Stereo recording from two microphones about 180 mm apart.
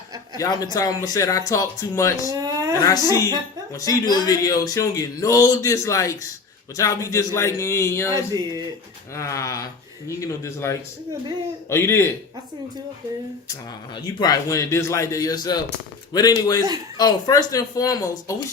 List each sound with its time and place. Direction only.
0.3 s speech: 20° left (ahead or behind)
2.3 s a sound: 20° right (ahead or behind)
2.7 s speech: 20° left (ahead or behind)
8.1 s music: 20° right (ahead or behind)
9.1 s speech: 15° left (ahead or behind)
14.2 s speech: 20° left (ahead or behind)